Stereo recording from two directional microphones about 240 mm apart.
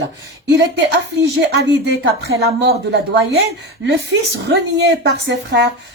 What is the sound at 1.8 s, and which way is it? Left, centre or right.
A woman's voice, right.